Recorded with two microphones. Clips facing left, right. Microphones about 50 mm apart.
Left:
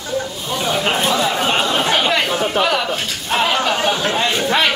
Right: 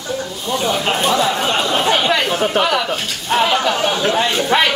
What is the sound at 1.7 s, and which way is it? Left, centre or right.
Chatter, centre.